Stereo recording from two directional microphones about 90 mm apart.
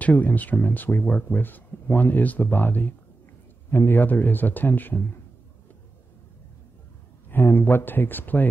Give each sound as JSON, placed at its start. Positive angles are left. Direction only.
{"t": 0.0, "sound": "speech", "side_deg": 15}
{"t": 7.2, "sound": "speech", "side_deg": 20}